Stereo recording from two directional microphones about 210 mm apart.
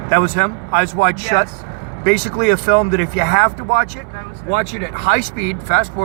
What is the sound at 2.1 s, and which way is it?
Speech, 45° left (ahead or behind).